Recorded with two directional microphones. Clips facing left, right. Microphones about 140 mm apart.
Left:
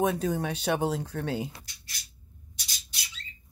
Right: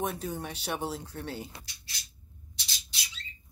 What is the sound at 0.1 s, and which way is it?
Speech, 80° left.